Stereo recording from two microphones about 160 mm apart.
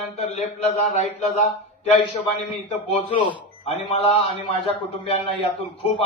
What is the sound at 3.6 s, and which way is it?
Speech, 40° left (ahead or behind).